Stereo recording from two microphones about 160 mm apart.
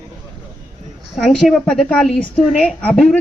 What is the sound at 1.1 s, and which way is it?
A woman's voice, centre (ahead or behind).